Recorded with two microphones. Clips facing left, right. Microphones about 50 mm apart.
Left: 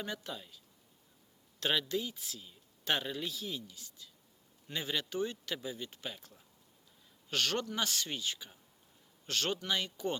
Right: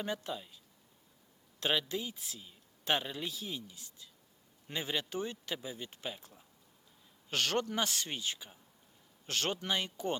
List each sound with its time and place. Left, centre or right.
0.0 s speech: right
1.5 s speech: right
7.3 s speech: right